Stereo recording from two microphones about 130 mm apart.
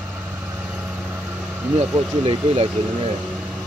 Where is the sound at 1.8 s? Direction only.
45° right (ahead or behind).